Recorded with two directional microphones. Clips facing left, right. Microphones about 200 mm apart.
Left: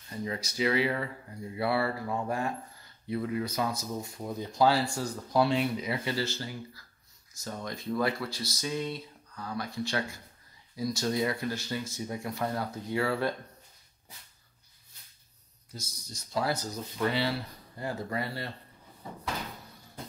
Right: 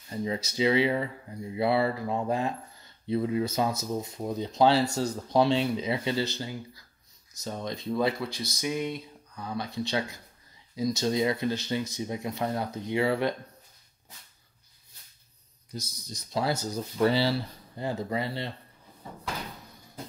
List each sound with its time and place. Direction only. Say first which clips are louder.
0.1 s speech: right 4 dB; 25° right (ahead or behind)
15.7 s speech: right 6 dB; 20° right (ahead or behind)